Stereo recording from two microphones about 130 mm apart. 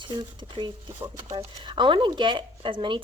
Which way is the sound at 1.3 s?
35° right (ahead or behind).